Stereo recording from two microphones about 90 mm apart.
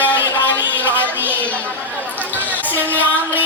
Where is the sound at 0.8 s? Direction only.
20° right (ahead or behind).